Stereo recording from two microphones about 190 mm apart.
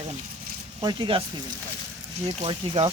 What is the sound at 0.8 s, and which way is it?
Speech, 25° right (ahead or behind).